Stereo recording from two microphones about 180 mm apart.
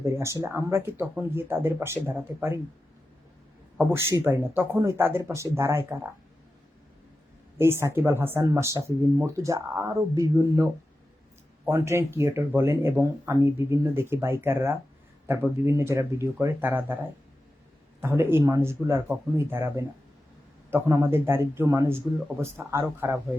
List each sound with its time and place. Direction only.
0.0 s speech: 15° right (ahead or behind)
3.8 s speech: 15° right (ahead or behind)
7.6 s speech: 15° right (ahead or behind)